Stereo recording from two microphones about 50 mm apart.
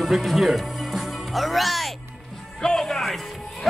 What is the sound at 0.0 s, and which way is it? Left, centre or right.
Music, centre.